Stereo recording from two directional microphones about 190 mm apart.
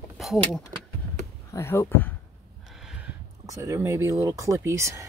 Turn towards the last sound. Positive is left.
turn(degrees=-15)  # may be behind; listen again after turning